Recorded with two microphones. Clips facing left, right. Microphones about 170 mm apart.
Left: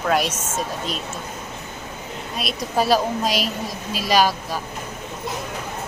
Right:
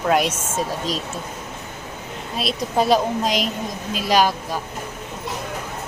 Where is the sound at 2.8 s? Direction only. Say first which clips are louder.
Right 1 dB; 5° left (ahead or behind).